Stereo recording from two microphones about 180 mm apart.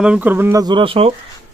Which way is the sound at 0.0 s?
5° right (ahead or behind).